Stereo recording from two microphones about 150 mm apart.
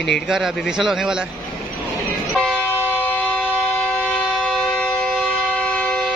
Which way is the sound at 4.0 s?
5° left (ahead or behind).